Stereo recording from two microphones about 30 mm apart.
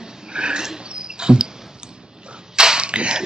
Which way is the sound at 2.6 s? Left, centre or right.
Right.